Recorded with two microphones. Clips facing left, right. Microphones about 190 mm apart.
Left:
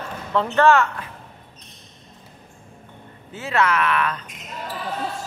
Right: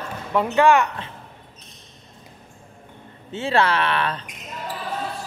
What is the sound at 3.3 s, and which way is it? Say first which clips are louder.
Speech: right 1 dB; 30° right (ahead or behind).